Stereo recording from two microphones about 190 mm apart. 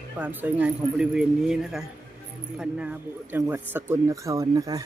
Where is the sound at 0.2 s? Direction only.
10° right (ahead or behind).